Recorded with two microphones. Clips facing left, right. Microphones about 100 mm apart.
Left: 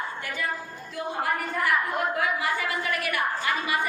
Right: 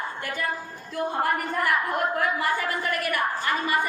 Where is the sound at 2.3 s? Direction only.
45° right (ahead or behind).